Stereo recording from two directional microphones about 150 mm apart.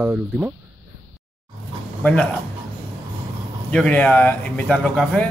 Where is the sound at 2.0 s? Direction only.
10° left (ahead or behind).